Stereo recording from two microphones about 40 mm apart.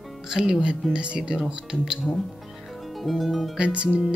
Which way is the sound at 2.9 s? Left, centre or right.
Centre.